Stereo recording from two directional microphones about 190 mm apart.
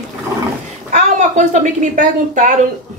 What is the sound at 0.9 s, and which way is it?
A woman's voice, 40° right (ahead or behind).